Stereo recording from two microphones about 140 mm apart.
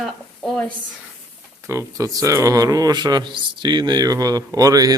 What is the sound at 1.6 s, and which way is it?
A man's voice, 20° right (ahead or behind).